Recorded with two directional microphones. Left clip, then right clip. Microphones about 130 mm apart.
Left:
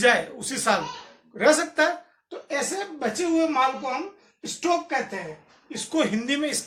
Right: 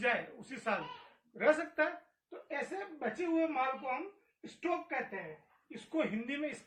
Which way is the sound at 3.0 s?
15° left (ahead or behind).